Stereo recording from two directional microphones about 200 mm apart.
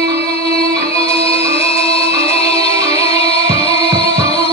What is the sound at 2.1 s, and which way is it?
Music, 30° left (ahead or behind).